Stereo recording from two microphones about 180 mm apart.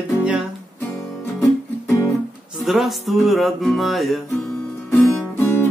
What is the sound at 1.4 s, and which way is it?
Music, 20° left (ahead or behind).